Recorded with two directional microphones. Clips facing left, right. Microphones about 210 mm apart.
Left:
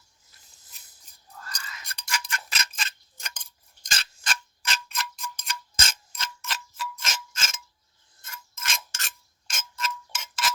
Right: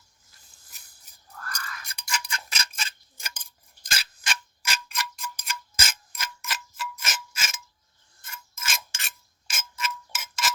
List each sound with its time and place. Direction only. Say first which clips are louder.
1.4 s whispering: right 3 dB; 20° left (ahead or behind)
1.9 s a sound: left 1 dB; 10° right (ahead or behind)
3.8 s tick-tock: even; 5° right (ahead or behind)
8.3 s mechanisms: even; 5° right (ahead or behind)